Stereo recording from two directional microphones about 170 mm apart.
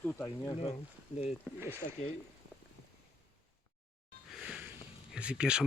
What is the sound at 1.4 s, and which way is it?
Speech, 15° right (ahead or behind).